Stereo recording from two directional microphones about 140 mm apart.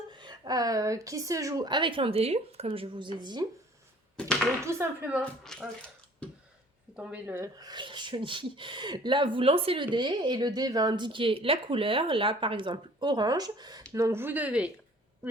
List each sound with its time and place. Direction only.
0.1 s speech: 30° right (ahead or behind)
4.6 s speech: 20° right (ahead or behind)
5.2 s speech: 5° left (ahead or behind)
6.9 s speech: 10° right (ahead or behind)